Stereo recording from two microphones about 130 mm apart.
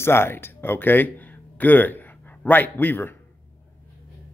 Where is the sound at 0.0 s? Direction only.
20° left (ahead or behind).